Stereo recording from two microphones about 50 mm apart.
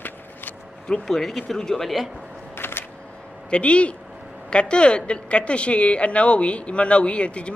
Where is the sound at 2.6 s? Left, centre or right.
Left.